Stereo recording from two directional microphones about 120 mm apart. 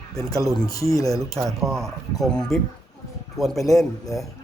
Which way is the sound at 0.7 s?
30° left (ahead or behind).